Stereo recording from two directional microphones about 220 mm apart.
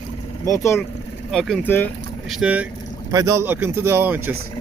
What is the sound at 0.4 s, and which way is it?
Speech, 15° left (ahead or behind).